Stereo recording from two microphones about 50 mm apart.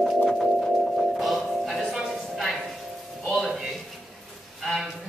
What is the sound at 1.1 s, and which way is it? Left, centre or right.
Music, centre.